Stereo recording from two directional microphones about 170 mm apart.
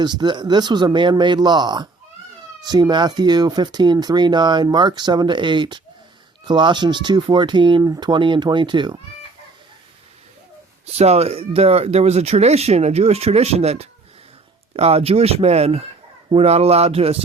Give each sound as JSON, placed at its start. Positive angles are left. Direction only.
{"t": 0.0, "sound": "speech", "side_deg": -25}
{"t": 10.8, "sound": "speech", "side_deg": -40}